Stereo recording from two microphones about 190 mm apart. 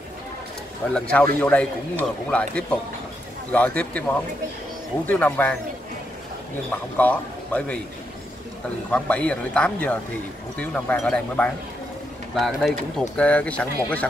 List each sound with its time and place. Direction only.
0.9 s speech: 10° left (ahead or behind)
7.0 s speech: 10° left (ahead or behind)
8.9 s speech: 5° left (ahead or behind)